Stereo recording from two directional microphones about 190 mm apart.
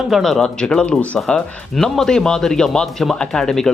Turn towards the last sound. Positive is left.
turn(degrees=5)  # may be behind; listen again after turning